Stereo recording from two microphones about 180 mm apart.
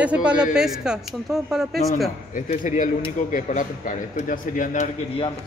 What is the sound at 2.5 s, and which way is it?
A man's voice, 45° left (ahead or behind).